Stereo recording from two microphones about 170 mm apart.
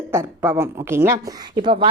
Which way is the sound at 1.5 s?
30° right (ahead or behind).